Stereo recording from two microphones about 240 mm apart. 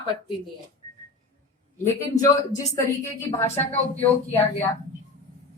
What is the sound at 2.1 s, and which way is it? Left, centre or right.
Speech, left.